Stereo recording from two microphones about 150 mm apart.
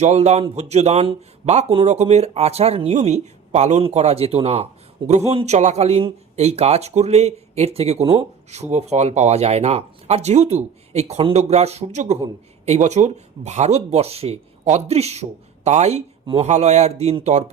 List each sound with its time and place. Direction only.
0.0 s speech: 50° right (ahead or behind)